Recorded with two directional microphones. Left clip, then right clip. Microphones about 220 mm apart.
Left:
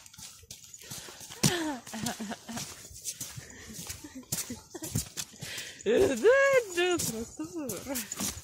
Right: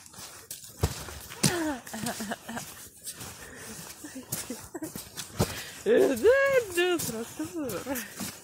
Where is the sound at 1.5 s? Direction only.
25° right (ahead or behind).